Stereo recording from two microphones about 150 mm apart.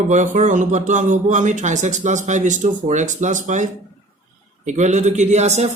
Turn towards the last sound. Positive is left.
turn(degrees=-50)  # may be behind; listen again after turning